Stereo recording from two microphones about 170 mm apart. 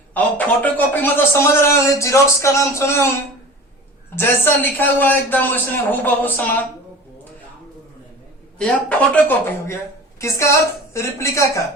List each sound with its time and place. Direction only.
0.1 s a man's voice: 10° left (ahead or behind)
4.1 s a man's voice: 15° left (ahead or behind)
8.5 s a man's voice: 5° left (ahead or behind)